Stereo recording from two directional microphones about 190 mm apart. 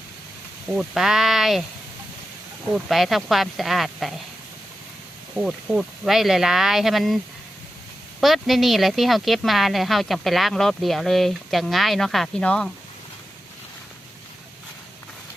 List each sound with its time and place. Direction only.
0.7 s speech: 5° right (ahead or behind)
2.7 s speech: centre (ahead or behind)
5.3 s speech: 5° right (ahead or behind)
8.2 s speech: centre (ahead or behind)